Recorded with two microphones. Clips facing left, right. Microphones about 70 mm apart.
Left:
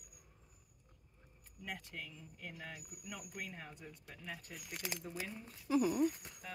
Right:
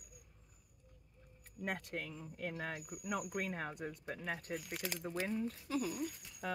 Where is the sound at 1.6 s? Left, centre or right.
Right.